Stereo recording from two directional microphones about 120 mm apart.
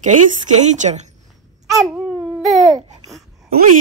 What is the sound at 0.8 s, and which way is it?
Speech, 75° right (ahead or behind).